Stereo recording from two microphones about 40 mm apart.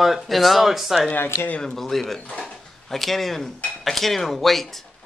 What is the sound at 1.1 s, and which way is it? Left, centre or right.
Speech, left.